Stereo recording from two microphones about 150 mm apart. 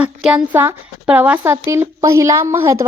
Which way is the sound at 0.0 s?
5° right (ahead or behind).